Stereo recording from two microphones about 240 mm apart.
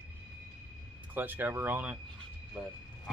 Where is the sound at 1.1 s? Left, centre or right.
Centre.